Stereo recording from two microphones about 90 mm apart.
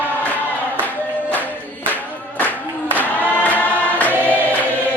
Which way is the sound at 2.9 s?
20° left (ahead or behind).